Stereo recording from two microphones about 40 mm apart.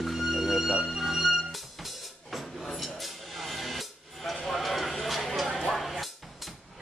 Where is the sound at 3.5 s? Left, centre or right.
Centre.